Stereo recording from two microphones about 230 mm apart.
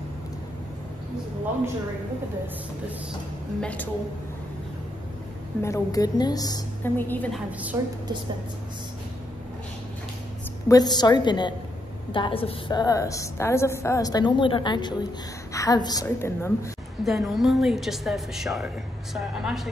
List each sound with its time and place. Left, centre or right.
3.6 s a woman's voice: centre
5.6 s a woman's voice: centre
7.7 s a woman's voice: centre
10.7 s a woman's voice: centre
17.0 s a woman's voice: centre